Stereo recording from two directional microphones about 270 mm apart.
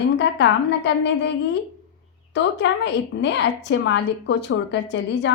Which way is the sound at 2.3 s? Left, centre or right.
Left.